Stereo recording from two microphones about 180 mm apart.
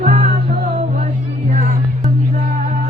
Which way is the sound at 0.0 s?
40° right (ahead or behind).